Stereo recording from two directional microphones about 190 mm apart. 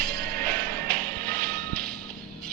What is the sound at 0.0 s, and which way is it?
Music, 55° right (ahead or behind).